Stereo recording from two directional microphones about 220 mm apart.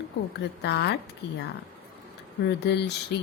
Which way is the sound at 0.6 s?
50° left (ahead or behind).